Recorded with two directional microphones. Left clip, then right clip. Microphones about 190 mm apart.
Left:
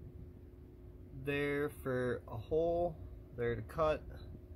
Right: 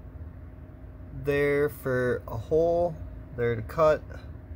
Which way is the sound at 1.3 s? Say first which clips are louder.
Right 12 dB; 5° right (ahead or behind).